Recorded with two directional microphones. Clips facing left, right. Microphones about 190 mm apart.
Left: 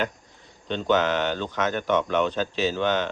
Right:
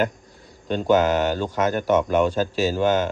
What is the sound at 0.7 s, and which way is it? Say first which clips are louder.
Speech: right 4 dB; 45° right (ahead or behind).